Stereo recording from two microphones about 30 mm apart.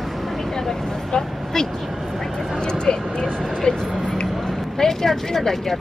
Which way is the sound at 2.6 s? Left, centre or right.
Left.